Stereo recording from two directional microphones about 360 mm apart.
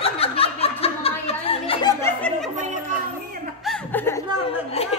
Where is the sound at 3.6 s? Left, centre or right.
Centre.